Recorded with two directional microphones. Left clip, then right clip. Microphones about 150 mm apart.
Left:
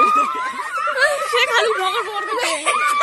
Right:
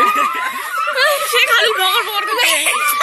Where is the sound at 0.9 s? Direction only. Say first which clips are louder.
Right 3 dB; 45° left (ahead or behind).